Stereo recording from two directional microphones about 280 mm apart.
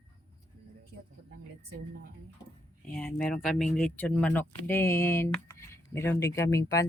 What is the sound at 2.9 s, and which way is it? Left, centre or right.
Speech, centre.